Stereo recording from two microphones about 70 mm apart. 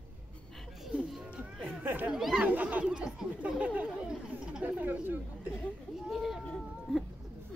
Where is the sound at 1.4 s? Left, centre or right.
Centre.